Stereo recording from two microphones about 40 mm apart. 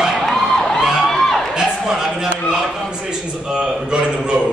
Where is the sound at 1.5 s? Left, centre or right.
Centre.